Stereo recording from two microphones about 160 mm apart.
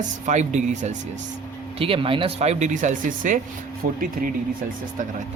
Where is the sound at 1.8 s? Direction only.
35° right (ahead or behind); by 4.0 s 60° right (ahead or behind).